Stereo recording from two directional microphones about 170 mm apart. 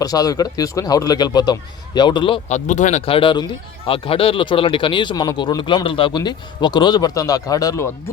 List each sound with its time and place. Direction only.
0.0 s a man's voice: 20° left (ahead or behind)
2.5 s speech: 45° left (ahead or behind)
3.1 s a man's voice: 30° left (ahead or behind)